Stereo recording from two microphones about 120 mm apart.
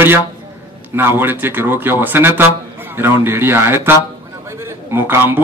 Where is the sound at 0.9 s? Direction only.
15° right (ahead or behind).